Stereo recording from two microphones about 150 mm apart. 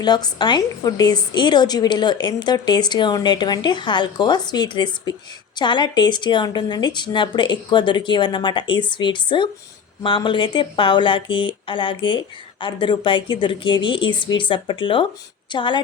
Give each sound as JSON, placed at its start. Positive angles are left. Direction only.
{"t": 0.0, "sound": "a woman's voice", "side_deg": 30}